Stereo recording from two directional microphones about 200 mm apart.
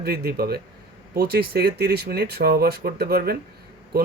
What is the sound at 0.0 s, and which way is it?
Speech, 50° right (ahead or behind).